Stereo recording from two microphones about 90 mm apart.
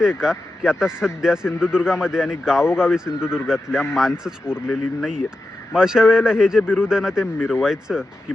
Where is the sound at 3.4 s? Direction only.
5° right (ahead or behind).